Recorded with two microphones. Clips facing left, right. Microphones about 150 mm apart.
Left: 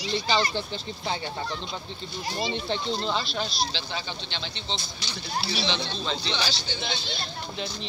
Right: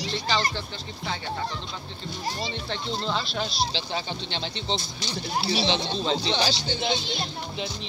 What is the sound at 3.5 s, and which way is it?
Speech, 35° right (ahead or behind).